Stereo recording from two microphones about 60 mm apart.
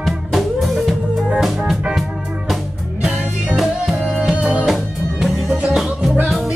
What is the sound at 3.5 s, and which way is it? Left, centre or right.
Music, centre.